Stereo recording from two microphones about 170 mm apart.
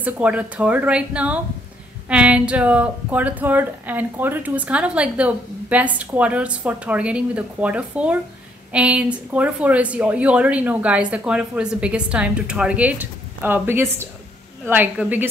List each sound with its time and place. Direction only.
0.0 s speech: 10° right (ahead or behind)